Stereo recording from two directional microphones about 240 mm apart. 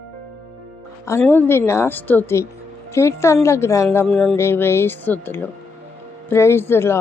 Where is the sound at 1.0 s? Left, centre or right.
Centre.